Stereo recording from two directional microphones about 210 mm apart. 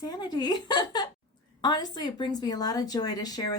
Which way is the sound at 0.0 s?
20° left (ahead or behind).